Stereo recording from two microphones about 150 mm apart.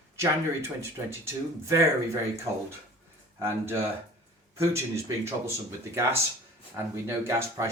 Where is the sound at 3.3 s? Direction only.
15° right (ahead or behind).